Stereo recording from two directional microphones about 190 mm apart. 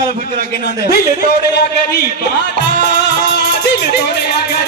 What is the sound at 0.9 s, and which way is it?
Music, 55° left (ahead or behind).